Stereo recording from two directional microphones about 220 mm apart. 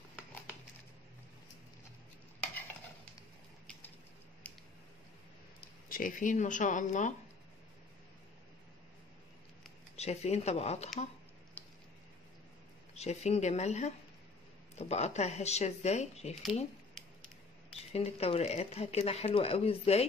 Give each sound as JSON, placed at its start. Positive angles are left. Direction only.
{"t": 4.4, "sound": "a sound", "side_deg": 5}
{"t": 5.9, "sound": "speech", "side_deg": 40}
{"t": 9.9, "sound": "speech", "side_deg": 30}
{"t": 11.6, "sound": "squish", "side_deg": 10}
{"t": 12.9, "sound": "speech", "side_deg": 30}
{"t": 17.9, "sound": "speech", "side_deg": 30}